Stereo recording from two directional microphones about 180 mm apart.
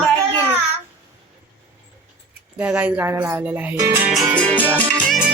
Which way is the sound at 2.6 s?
5° right (ahead or behind).